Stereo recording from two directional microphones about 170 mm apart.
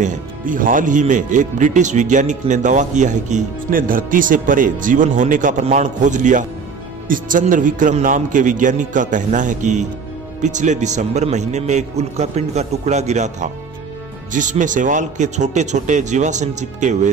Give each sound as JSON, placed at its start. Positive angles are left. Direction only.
{"t": 0.0, "sound": "speech", "side_deg": -50}